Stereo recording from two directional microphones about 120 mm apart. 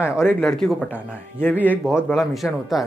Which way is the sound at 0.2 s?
15° left (ahead or behind).